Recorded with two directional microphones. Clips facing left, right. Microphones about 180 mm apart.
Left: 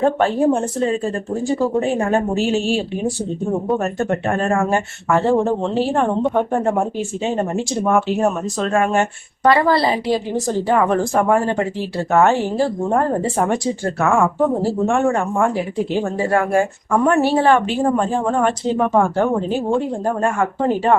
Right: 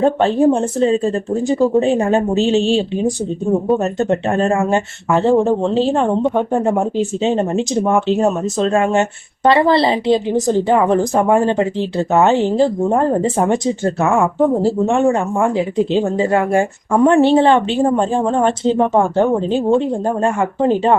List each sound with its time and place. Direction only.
0.0 s speech: 20° right (ahead or behind)